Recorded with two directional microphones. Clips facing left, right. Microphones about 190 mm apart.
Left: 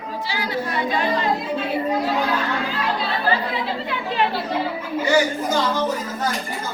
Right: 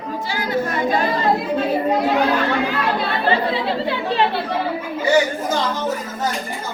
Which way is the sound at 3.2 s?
30° right (ahead or behind).